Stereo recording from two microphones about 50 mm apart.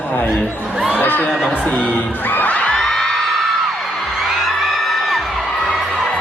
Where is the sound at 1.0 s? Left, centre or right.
Left.